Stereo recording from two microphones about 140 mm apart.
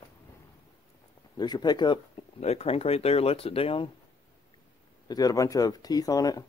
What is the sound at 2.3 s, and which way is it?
Speech, 50° left (ahead or behind).